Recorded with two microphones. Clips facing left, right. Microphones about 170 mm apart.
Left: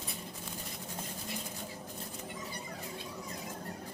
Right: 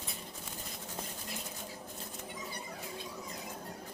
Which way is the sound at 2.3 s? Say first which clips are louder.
Left 1 dB; 5° right (ahead or behind).